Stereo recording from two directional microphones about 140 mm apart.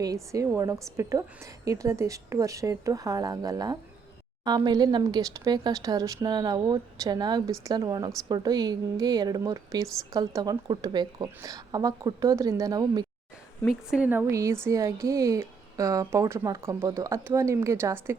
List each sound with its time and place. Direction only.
0.0 s a woman's voice: 25° right (ahead or behind)
13.7 s a woman's voice: 10° right (ahead or behind)